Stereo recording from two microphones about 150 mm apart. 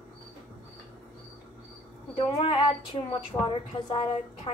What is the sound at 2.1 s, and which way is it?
A woman's voice, 35° left (ahead or behind).